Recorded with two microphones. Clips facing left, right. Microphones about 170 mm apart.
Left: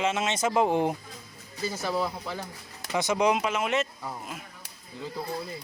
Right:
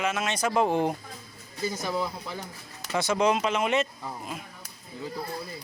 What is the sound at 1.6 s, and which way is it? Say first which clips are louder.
Speech: even; 15° right (ahead or behind).